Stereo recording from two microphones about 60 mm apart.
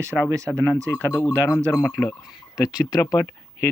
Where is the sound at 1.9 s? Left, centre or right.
Left.